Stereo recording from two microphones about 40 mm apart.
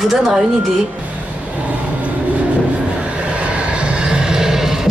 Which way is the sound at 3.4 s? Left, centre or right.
Right.